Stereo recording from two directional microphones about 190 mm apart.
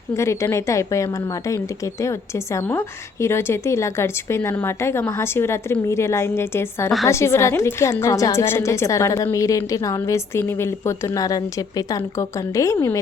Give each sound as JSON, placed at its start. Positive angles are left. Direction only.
{"t": 0.2, "sound": "a woman's voice", "side_deg": 15}